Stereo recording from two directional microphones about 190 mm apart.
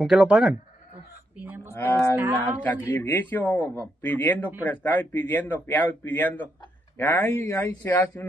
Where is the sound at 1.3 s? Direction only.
10° right (ahead or behind).